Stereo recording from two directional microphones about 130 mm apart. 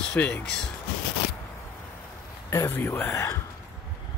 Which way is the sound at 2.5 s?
20° left (ahead or behind).